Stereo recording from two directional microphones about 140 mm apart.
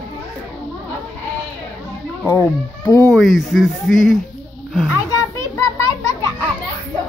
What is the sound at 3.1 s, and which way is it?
Speech, centre (ahead or behind).